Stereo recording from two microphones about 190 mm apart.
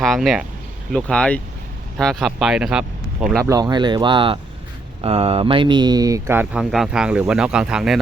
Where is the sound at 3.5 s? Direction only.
20° right (ahead or behind).